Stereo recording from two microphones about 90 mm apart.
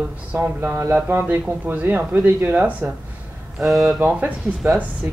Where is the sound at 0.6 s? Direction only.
30° right (ahead or behind).